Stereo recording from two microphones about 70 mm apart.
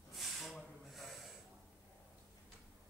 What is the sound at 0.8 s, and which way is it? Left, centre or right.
Snort, centre.